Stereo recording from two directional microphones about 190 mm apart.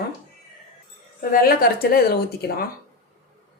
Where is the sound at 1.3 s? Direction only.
50° left (ahead or behind).